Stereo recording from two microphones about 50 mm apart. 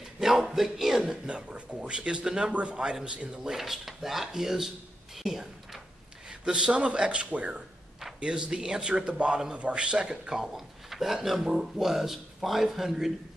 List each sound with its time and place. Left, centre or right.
0.2 s speech: centre
1.2 s a man's voice: right
3.5 s speech: centre
6.4 s a man's voice: centre